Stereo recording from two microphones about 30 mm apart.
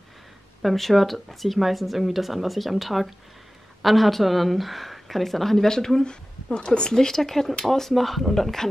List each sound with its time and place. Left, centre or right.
0.6 s speech: centre
6.0 s speech: left
6.9 s speech: centre